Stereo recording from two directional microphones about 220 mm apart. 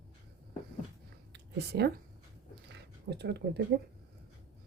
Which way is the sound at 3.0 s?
50° right (ahead or behind).